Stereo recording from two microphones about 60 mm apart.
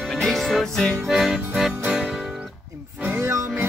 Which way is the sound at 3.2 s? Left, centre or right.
Right.